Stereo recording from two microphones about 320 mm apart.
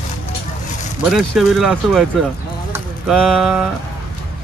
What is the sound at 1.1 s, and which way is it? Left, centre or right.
Speech, centre.